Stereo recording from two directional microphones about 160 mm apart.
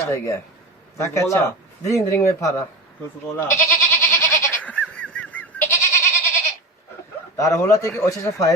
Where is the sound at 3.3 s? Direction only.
20° left (ahead or behind).